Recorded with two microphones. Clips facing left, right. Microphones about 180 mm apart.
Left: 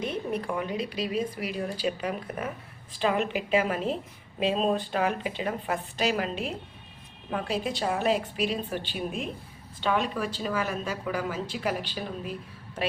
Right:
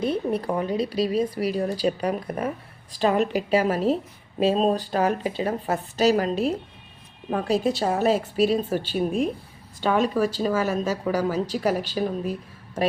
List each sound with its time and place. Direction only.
0.0 s a woman's voice: 35° right (ahead or behind)